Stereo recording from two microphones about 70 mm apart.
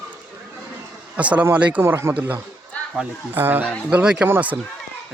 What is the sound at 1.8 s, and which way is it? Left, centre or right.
Speech, right.